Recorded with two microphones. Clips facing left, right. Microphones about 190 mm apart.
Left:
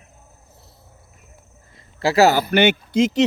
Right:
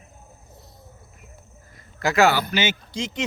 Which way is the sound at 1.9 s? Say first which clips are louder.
Left 4 dB; 35° left (ahead or behind).